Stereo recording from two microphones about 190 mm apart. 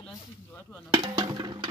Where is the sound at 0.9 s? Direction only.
20° right (ahead or behind).